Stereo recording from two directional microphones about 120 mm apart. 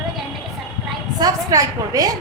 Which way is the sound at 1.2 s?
30° right (ahead or behind).